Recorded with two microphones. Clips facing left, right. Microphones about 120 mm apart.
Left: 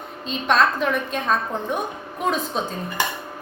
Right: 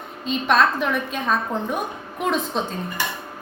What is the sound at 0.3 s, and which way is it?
Speech, centre (ahead or behind).